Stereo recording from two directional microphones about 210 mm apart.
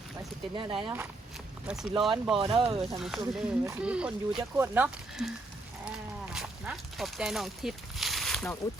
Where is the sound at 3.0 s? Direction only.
Centre (ahead or behind).